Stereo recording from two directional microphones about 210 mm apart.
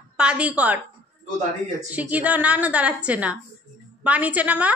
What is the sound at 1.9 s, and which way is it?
A woman's voice, 5° right (ahead or behind).